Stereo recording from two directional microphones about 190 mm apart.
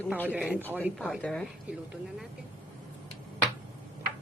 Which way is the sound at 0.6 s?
10° left (ahead or behind).